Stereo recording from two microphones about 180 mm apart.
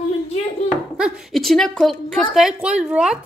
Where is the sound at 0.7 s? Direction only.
5° right (ahead or behind).